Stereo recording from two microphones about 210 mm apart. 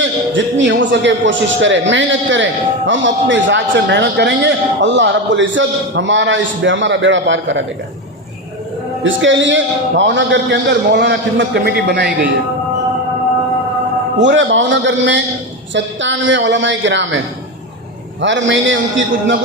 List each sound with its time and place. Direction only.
0.6 s a man's voice: 60° right (ahead or behind)
9.0 s a man's voice: 60° right (ahead or behind)
14.2 s a man's voice: 60° right (ahead or behind)
18.2 s a man's voice: 60° right (ahead or behind)